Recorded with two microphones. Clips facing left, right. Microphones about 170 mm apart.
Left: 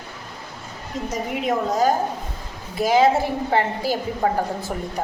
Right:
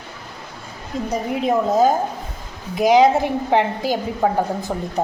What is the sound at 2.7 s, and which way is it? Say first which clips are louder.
A woman's voice: right 3 dB; 15° right (ahead or behind).